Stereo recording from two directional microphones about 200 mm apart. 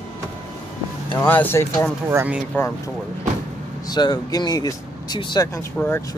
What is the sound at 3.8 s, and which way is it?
Speech, 20° left (ahead or behind).